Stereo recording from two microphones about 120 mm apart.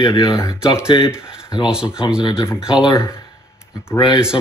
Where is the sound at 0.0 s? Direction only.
40° left (ahead or behind).